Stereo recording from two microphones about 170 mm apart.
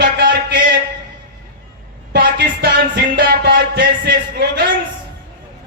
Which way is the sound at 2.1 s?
85° right.